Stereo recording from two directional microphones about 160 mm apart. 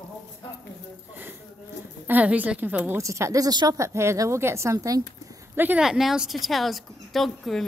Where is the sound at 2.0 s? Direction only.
10° right (ahead or behind).